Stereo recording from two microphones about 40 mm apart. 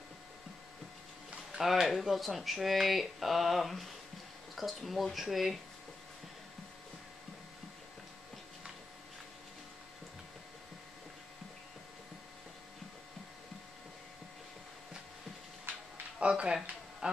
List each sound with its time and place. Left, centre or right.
1.6 s speech: centre
16.2 s a sound: right
17.0 s music: right